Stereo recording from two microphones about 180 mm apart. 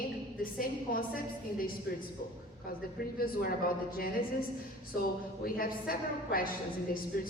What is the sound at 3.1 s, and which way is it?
Speech, 55° left (ahead or behind).